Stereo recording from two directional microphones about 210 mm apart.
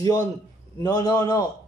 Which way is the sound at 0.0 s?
15° left (ahead or behind).